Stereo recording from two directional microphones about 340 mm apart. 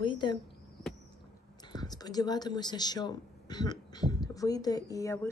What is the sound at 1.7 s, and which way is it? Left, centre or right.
Speech, centre.